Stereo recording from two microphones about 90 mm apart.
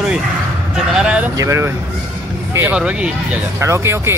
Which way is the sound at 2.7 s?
10° right (ahead or behind).